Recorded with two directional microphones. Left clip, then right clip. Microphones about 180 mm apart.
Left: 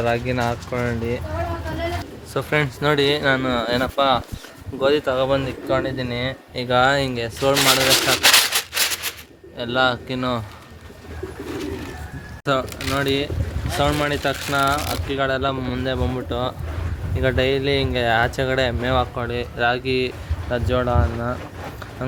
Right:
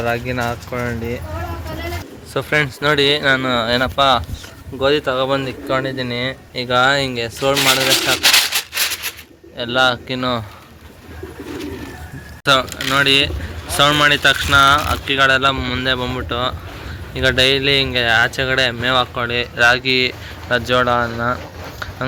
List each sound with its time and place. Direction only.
0.0 s speech: 5° left (ahead or behind)
2.3 s speech: 5° left (ahead or behind)
7.8 s speech: 25° left (ahead or behind)
8.2 s rub: 40° left (ahead or behind)
9.6 s speech: centre (ahead or behind)
12.9 s speech: centre (ahead or behind)
17.2 s speech: centre (ahead or behind)